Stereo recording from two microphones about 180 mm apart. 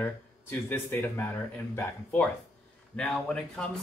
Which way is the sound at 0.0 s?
10° left (ahead or behind).